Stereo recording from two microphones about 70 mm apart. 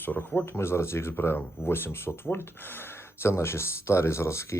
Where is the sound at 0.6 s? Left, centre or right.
Left.